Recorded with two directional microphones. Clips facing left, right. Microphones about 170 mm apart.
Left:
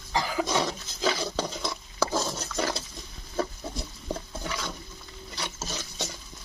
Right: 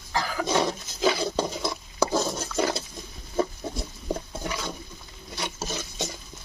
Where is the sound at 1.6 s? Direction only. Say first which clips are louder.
Right 3 dB; 20° right (ahead or behind).